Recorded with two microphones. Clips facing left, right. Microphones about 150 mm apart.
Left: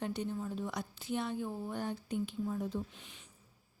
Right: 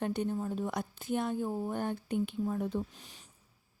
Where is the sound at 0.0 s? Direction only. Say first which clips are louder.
Right 4 dB; 55° right (ahead or behind).